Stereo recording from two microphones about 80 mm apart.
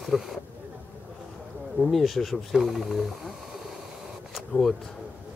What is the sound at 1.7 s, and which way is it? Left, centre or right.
Speech, centre.